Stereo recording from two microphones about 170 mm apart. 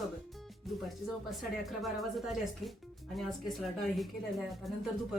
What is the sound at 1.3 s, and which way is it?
Speech, centre (ahead or behind).